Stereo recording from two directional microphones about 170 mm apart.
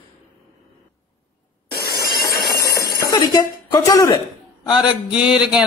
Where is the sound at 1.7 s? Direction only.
70° left (ahead or behind).